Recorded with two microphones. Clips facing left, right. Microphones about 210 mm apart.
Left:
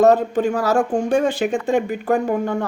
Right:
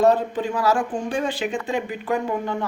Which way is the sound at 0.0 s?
45° left (ahead or behind).